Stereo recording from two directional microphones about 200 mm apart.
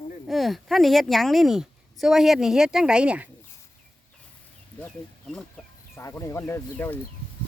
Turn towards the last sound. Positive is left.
turn(degrees=10)  # may be behind; listen again after turning